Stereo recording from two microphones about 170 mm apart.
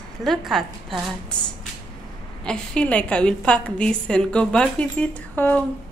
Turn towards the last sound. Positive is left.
turn(degrees=10)  # may be behind; listen again after turning